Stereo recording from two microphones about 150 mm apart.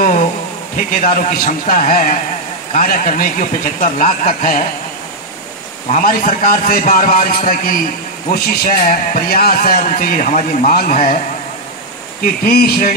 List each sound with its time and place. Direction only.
0.7 s a man's voice: 70° left (ahead or behind)
5.9 s a man's voice: 65° left (ahead or behind)
12.2 s speech: 90° left